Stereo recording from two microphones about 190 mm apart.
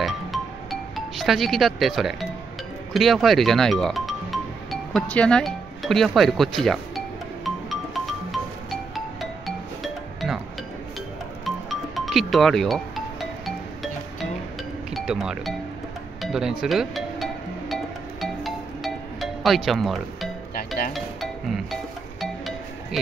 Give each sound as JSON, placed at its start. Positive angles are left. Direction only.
{"t": 0.0, "sound": "music", "side_deg": 0}
{"t": 2.9, "sound": "speech", "side_deg": 0}
{"t": 7.4, "sound": "music", "side_deg": 0}
{"t": 11.4, "sound": "music", "side_deg": 0}
{"t": 14.9, "sound": "speech", "side_deg": 0}
{"t": 16.2, "sound": "music", "side_deg": -5}
{"t": 20.5, "sound": "music", "side_deg": 50}
{"t": 20.9, "sound": "music", "side_deg": 0}